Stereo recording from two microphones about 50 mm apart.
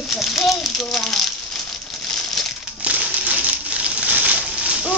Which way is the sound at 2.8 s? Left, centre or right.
Right.